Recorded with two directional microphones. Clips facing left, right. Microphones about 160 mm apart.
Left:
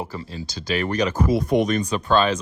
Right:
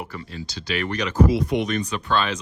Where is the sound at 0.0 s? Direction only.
30° left (ahead or behind).